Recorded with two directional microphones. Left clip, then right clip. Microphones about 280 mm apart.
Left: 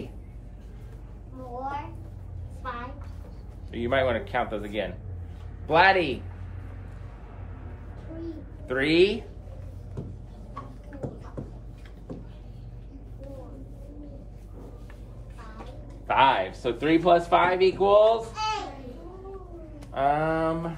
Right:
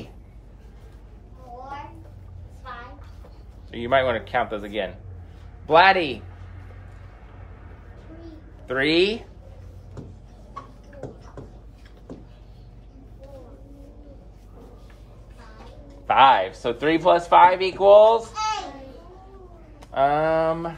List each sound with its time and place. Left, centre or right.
3.7 s a man's voice: right
8.6 s a man's voice: right
16.1 s speech: right
19.8 s speech: right